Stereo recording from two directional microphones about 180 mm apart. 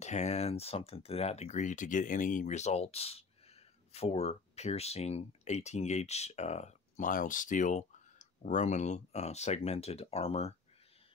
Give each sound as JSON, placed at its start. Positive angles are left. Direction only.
{"t": 0.0, "sound": "speech", "side_deg": 40}